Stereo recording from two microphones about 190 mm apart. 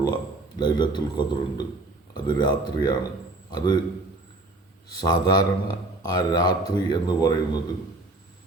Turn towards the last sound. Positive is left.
turn(degrees=20)  # may be behind; listen again after turning